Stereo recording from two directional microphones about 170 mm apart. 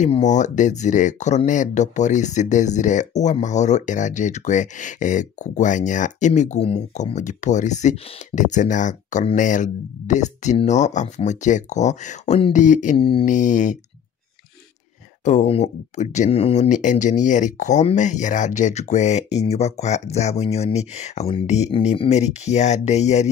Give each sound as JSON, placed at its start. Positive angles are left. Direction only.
{"t": 0.0, "sound": "speech", "side_deg": 45}
{"t": 12.9, "sound": "speech", "side_deg": 30}
{"t": 13.2, "sound": "speech", "side_deg": 45}
{"t": 15.2, "sound": "speech", "side_deg": 40}